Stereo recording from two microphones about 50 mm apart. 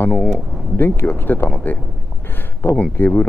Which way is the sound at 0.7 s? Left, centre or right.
Left.